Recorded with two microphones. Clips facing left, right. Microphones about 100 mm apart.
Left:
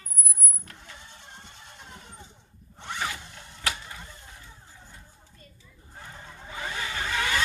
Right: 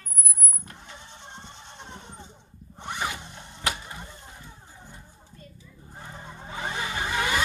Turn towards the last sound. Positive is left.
turn(degrees=-15)  # may be behind; listen again after turning